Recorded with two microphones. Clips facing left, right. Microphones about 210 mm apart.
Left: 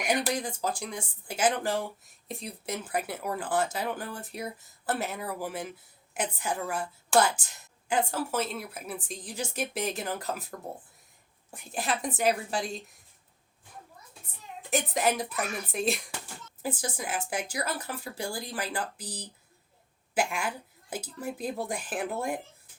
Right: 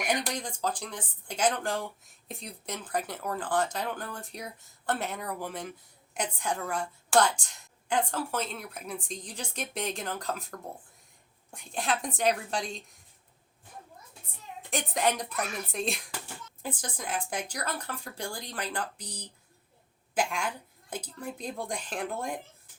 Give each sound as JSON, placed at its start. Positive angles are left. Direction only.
{"t": 0.1, "sound": "a woman's voice", "side_deg": 10}
{"t": 14.7, "sound": "a woman's voice", "side_deg": 5}